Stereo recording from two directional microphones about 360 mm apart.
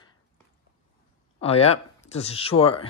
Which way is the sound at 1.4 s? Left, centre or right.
Centre.